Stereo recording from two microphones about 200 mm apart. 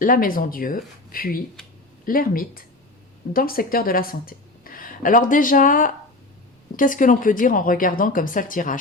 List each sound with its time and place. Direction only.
0.0 s a woman's voice: 45° left (ahead or behind)